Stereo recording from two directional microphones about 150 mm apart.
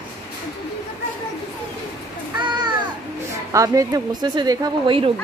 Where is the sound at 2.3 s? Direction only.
30° right (ahead or behind).